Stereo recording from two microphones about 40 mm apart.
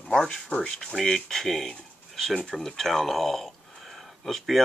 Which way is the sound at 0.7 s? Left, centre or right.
Centre.